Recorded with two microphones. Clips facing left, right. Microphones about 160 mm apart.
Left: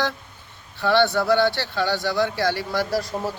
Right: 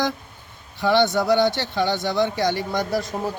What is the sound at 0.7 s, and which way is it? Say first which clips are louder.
Speech: right 1 dB; 15° right (ahead or behind).